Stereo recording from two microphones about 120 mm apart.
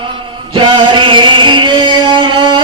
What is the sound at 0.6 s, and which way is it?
Music, 40° right (ahead or behind).